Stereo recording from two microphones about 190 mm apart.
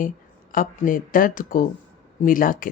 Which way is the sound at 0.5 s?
45° left (ahead or behind).